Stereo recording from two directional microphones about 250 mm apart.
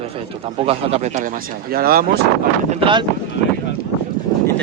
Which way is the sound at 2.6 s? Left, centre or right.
Centre.